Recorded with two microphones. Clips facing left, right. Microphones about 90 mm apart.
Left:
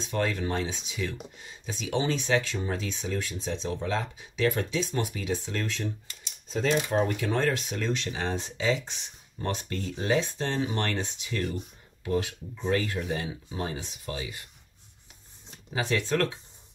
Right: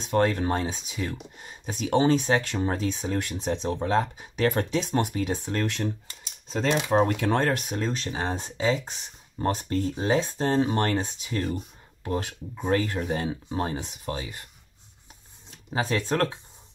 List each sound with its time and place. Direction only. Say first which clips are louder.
0.0 s speech: right 6 dB; 50° right (ahead or behind)
3.2 s speech: right 4 dB; 60° right (ahead or behind)
3.7 s speech: right 6 dB; 40° right (ahead or behind)
6.5 s speech: right 2 dB; 70° right (ahead or behind); by 7.7 s 50° right (ahead or behind)
7.7 s speech: right 1 dB; 35° right (ahead or behind)
12.3 s speech: right 2 dB; 50° right (ahead or behind)
15.7 s speech: right 1 dB; 40° right (ahead or behind)